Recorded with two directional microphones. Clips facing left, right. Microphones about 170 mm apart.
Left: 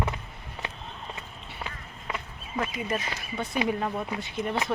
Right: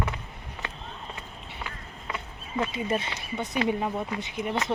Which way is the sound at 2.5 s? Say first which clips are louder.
Right 2 dB; 30° right (ahead or behind).